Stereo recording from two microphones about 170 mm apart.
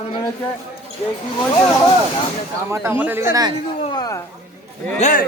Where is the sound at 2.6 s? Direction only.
15° right (ahead or behind).